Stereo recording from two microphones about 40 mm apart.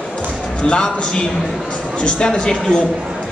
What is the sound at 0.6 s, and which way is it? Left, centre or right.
A man's voice, left.